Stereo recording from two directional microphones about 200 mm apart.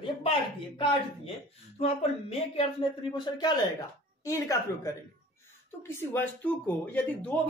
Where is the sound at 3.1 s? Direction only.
20° left (ahead or behind).